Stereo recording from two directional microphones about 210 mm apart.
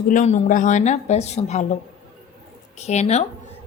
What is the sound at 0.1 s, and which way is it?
Speech, 35° left (ahead or behind).